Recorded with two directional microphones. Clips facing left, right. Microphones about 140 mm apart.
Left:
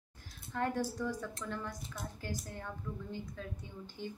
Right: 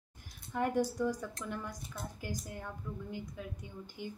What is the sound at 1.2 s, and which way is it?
A woman's voice, 10° right (ahead or behind).